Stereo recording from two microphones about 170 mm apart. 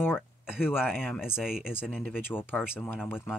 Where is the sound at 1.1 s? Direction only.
5° right (ahead or behind).